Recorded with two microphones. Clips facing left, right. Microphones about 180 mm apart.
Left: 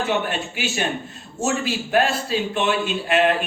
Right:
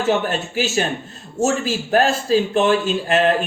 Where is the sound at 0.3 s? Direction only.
40° right (ahead or behind).